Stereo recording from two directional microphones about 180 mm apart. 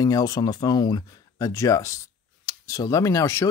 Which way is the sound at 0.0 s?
20° left (ahead or behind).